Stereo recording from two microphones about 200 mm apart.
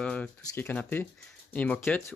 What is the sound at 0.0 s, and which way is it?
Speech, 5° left (ahead or behind).